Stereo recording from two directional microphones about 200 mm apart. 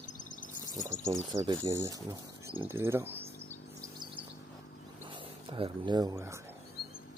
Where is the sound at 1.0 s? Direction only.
15° right (ahead or behind).